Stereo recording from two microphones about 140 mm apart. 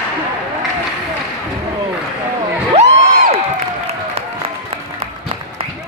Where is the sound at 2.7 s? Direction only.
50° right (ahead or behind).